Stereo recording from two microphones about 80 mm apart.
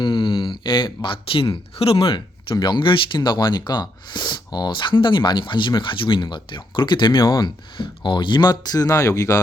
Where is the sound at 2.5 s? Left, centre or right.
Left.